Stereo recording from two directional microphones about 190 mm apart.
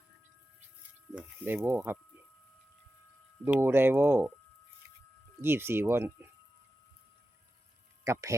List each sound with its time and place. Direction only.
1.1 s speech: 10° right (ahead or behind)
3.4 s speech: 10° right (ahead or behind)
5.4 s speech: 10° right (ahead or behind)
8.0 s speech: 15° right (ahead or behind)